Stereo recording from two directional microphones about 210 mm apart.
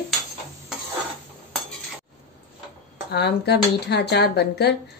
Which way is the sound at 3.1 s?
50° left (ahead or behind).